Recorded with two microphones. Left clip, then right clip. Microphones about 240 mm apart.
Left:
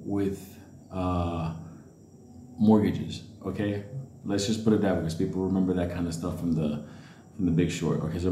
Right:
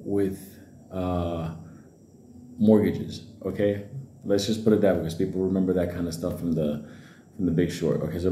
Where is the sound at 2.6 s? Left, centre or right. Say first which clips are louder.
Right 3 dB; centre.